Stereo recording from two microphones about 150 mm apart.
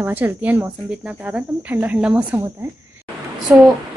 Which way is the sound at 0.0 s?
10° right (ahead or behind).